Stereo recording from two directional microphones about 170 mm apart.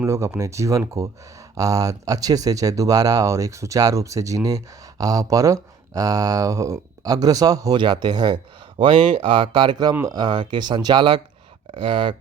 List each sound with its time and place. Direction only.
0.0 s speech: 15° right (ahead or behind); by 12.1 s 30° right (ahead or behind)